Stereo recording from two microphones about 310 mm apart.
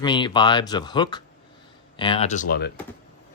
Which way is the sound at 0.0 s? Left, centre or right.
Centre.